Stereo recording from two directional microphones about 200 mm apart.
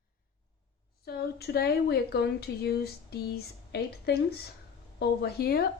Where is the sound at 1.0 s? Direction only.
50° left (ahead or behind).